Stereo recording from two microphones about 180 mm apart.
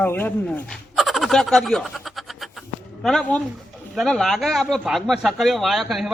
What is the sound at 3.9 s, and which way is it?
Speech, centre (ahead or behind).